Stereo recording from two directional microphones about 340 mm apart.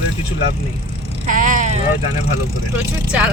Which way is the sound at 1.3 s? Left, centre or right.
Right.